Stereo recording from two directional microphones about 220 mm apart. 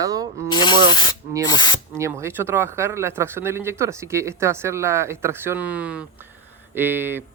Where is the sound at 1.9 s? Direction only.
15° right (ahead or behind).